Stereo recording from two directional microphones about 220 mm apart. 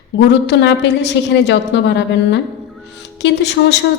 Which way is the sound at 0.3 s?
50° left (ahead or behind).